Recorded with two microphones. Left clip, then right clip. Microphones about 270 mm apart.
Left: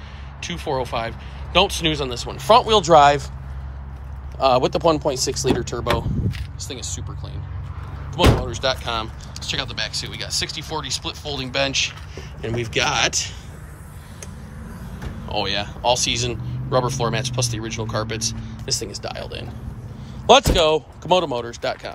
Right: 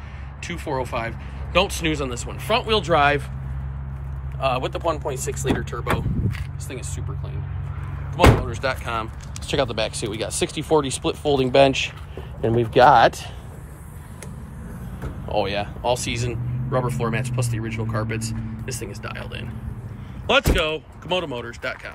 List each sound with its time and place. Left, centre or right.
0.4 s speech: centre
4.4 s speech: left
6.3 s speech: centre
8.1 s speech: centre
15.2 s speech: centre